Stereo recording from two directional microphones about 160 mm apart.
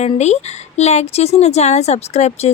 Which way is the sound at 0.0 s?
45° left (ahead or behind).